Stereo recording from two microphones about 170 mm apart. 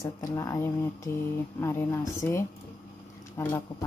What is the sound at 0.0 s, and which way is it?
Speech, 20° left (ahead or behind).